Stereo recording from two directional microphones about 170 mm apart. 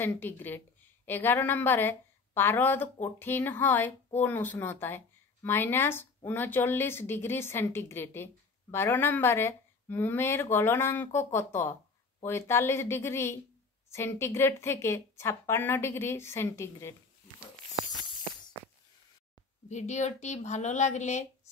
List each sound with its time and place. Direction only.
0.0 s speech: 10° left (ahead or behind)
19.7 s a woman's voice: 45° left (ahead or behind)